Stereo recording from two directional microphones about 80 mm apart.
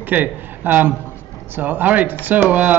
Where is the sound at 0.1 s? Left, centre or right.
Right.